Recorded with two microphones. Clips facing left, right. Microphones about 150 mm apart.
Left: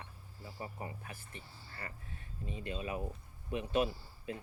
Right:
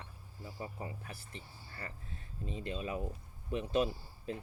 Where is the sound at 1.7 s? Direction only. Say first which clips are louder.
Right 1 dB; 35° right (ahead or behind).